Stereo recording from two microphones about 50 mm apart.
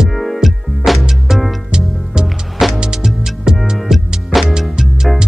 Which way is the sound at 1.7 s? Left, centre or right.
Centre.